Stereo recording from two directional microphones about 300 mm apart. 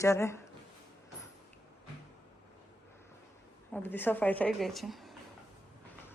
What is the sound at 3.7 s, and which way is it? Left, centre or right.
A woman's voice, centre.